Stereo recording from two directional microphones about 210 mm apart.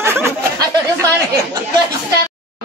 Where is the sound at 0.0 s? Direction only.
10° right (ahead or behind).